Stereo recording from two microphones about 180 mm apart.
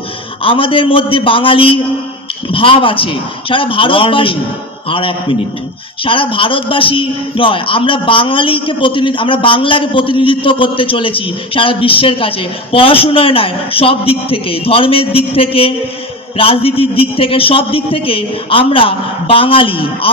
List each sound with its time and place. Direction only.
0.4 s a man's voice: 30° left (ahead or behind)